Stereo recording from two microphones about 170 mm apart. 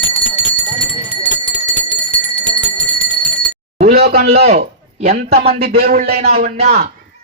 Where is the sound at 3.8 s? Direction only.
65° right (ahead or behind).